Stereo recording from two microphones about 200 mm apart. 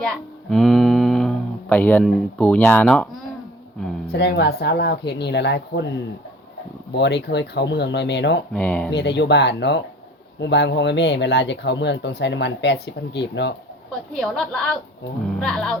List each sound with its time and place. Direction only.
0.5 s a sound: centre (ahead or behind)
1.7 s speech: 10° left (ahead or behind)
4.1 s speech: 55° left (ahead or behind)
6.9 s speech: 60° left (ahead or behind)
8.5 s speech: 5° left (ahead or behind)
8.9 s speech: 60° left (ahead or behind)
14.1 s a woman's voice: 5° left (ahead or behind)